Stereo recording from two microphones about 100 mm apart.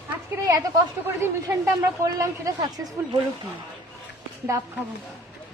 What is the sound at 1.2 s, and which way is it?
A man's voice, 25° right (ahead or behind).